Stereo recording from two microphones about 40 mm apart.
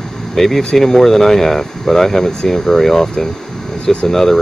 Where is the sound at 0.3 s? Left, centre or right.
Centre.